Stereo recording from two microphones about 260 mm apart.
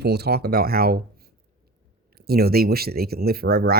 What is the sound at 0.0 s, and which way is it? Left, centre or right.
Speech, right.